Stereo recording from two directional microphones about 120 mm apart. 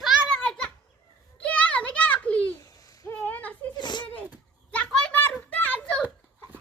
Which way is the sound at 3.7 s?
40° left (ahead or behind).